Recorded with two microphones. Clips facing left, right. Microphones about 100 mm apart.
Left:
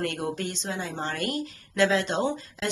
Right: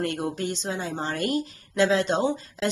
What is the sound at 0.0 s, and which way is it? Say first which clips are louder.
Speech: right 2 dB; 20° right (ahead or behind).